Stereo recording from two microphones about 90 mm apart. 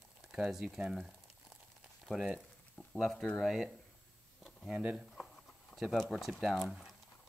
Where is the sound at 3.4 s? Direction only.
Centre (ahead or behind).